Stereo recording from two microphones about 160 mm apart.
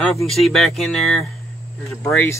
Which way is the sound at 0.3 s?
Centre (ahead or behind).